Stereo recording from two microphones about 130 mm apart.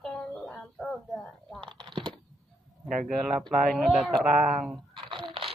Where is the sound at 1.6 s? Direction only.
40° right (ahead or behind).